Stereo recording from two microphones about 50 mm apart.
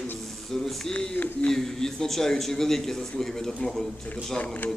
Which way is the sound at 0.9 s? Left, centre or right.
Left.